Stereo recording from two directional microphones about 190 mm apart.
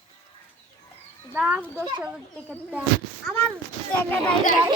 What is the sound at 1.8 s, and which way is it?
Speech, 25° right (ahead or behind).